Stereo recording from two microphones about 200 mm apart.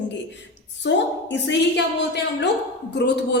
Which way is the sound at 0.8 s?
65° left (ahead or behind).